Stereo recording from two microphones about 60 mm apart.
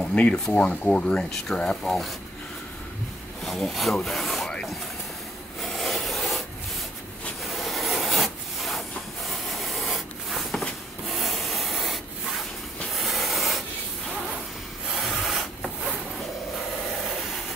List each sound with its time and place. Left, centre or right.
0.1 s speech: centre
1.9 s speech: centre
3.4 s speech: centre
5.6 s filing: centre
7.4 s rub: centre
15.0 s rub: centre